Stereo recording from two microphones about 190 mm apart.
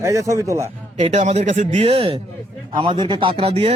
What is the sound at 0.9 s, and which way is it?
Speech, 35° right (ahead or behind).